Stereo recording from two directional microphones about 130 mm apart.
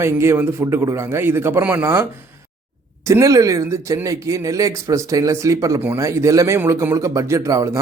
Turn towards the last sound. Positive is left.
turn(degrees=-25)  # may be behind; listen again after turning